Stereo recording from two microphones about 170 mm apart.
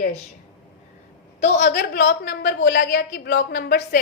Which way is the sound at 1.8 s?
90° left.